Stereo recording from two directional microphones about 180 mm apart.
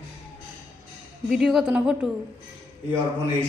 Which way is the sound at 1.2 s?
Centre (ahead or behind).